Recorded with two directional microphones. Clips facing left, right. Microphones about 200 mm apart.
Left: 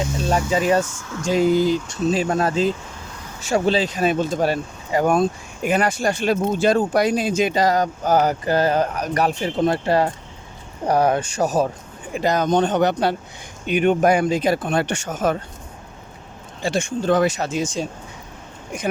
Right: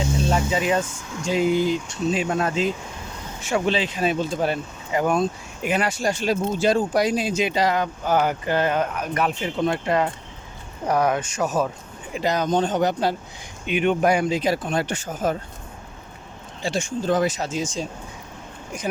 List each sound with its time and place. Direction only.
0.3 s speech: 40° left (ahead or behind)
12.1 s speech: 50° left (ahead or behind)
12.5 s speech: 70° left (ahead or behind)
13.7 s speech: 45° left (ahead or behind); by 15.4 s 75° left (ahead or behind)
16.6 s speech: 60° left (ahead or behind)